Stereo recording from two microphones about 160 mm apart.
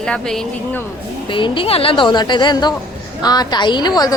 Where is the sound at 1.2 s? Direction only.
30° left (ahead or behind).